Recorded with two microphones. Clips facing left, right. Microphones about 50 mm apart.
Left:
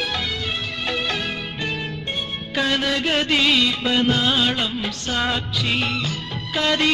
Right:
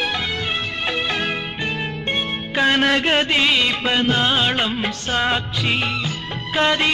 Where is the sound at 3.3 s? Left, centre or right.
Right.